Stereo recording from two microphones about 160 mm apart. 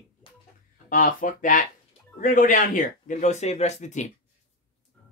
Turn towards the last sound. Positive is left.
turn(degrees=45)  # may be behind; listen again after turning